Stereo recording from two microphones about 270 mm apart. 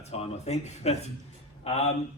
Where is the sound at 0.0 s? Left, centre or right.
Left.